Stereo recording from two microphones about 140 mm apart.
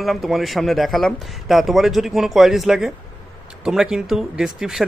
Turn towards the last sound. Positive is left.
turn(degrees=-5)  # may be behind; listen again after turning